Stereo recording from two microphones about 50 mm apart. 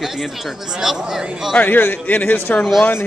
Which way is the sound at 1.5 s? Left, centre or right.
Left.